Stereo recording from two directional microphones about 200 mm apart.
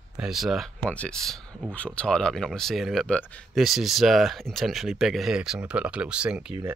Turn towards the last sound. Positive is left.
turn(degrees=-5)  # may be behind; listen again after turning